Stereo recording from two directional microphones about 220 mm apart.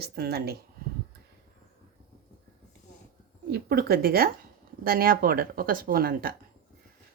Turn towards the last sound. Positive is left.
turn(degrees=-40)  # may be behind; listen again after turning